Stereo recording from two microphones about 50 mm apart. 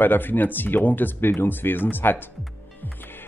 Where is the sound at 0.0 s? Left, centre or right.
Left.